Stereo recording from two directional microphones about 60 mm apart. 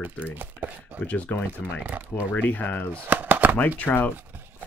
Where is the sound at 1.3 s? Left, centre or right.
Left.